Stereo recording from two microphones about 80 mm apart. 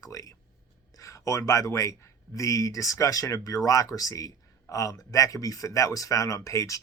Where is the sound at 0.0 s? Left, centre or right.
Left.